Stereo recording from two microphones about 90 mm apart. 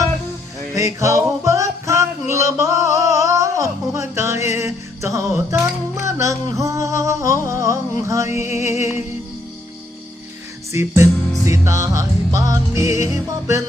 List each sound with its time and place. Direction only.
0.7 s music: 35° right (ahead or behind)
10.7 s music: 35° right (ahead or behind)